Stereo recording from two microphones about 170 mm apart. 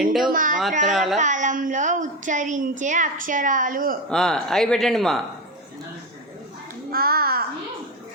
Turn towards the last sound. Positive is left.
turn(degrees=-65)  # may be behind; listen again after turning